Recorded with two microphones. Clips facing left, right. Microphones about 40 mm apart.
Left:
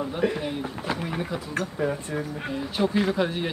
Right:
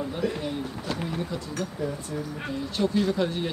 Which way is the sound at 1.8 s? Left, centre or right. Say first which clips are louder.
Left 5 dB; left.